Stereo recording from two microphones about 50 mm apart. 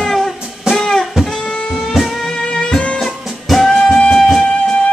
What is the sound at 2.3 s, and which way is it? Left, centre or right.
Music, centre.